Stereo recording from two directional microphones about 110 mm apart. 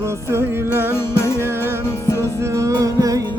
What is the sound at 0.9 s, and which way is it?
Music, 25° left (ahead or behind).